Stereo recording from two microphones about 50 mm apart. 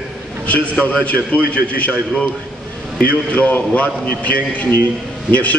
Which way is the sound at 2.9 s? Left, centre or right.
Left.